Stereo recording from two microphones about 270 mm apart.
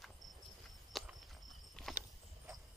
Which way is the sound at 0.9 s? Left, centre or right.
Centre.